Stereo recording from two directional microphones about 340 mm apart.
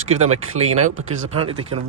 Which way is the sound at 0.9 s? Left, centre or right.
Right.